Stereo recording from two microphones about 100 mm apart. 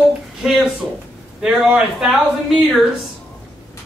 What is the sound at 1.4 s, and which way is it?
A man's voice, 10° right (ahead or behind).